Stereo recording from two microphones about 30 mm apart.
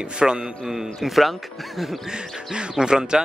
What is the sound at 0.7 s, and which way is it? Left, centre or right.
Speech, centre.